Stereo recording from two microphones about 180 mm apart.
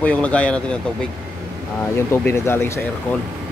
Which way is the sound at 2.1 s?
15° left (ahead or behind).